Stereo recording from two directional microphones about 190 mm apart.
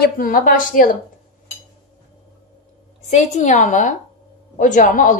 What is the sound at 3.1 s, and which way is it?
A woman's voice, 40° left (ahead or behind).